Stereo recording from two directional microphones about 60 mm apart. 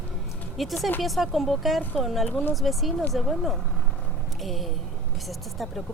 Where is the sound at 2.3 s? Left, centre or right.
Left.